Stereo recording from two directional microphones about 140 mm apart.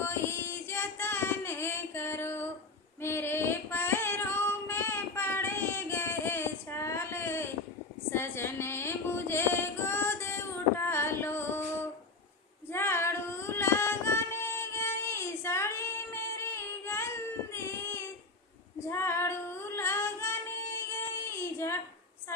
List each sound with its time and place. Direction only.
0.0 s child singing: 15° left (ahead or behind)
3.0 s female singing: 15° left (ahead or behind)
8.1 s a sound: 15° left (ahead or behind)
12.7 s female singing: 15° left (ahead or behind)
17.5 s a sound: 20° left (ahead or behind)
18.9 s female singing: 20° left (ahead or behind)